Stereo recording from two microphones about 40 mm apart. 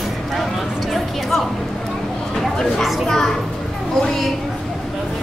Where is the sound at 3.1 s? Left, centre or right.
Centre.